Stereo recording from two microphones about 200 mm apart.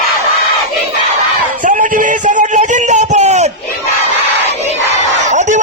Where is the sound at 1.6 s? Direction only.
40° right (ahead or behind).